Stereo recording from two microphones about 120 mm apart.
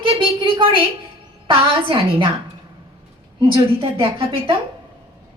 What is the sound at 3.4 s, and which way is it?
A woman's voice, 50° right (ahead or behind).